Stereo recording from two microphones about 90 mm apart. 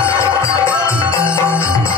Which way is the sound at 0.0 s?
30° left (ahead or behind).